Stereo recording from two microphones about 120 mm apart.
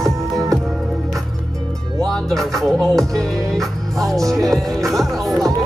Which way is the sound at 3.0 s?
Centre (ahead or behind).